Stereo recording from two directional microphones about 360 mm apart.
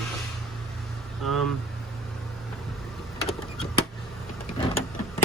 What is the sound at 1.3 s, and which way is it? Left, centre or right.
Speech, centre.